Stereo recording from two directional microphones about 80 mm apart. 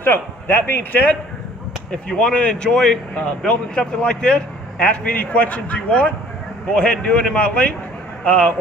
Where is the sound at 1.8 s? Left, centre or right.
Centre.